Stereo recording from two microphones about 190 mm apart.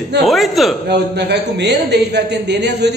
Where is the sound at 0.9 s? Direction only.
60° right (ahead or behind).